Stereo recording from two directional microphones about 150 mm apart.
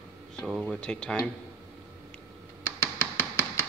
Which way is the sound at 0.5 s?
Centre (ahead or behind).